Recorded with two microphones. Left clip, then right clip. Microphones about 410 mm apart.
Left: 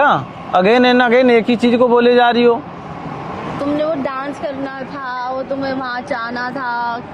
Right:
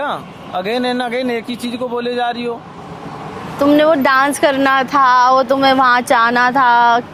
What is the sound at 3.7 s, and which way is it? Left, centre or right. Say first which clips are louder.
A woman's voice: right 9 dB; right.